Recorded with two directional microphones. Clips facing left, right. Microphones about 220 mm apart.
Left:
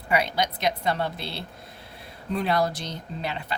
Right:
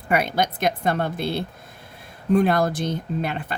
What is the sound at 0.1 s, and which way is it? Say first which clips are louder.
Speech: right 3 dB; 50° right (ahead or behind).